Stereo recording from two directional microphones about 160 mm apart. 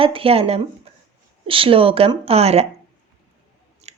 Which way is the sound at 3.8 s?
40° right (ahead or behind).